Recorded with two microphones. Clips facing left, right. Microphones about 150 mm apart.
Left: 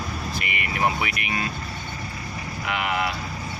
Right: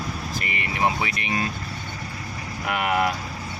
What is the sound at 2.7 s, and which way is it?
Speech, 45° right (ahead or behind).